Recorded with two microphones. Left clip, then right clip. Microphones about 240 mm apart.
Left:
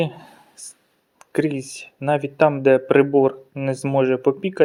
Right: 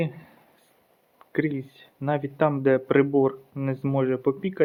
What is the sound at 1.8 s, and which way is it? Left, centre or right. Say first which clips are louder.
Speech: left 7 dB; centre.